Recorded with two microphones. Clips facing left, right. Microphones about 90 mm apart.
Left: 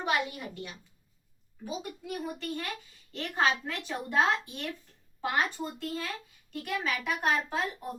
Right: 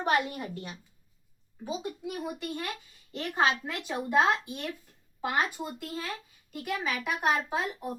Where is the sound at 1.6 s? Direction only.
25° right (ahead or behind).